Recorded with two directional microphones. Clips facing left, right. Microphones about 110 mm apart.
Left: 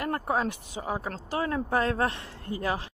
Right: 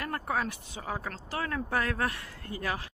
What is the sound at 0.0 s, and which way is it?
Speech, 25° left (ahead or behind).